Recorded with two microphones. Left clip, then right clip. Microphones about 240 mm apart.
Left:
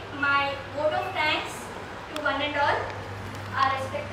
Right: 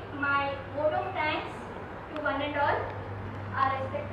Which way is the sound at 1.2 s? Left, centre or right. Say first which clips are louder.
Left 4 dB; centre.